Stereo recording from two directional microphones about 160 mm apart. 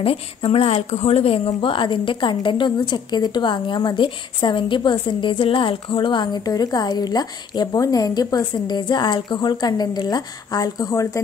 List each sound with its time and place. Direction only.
0.0 s speech: 35° left (ahead or behind)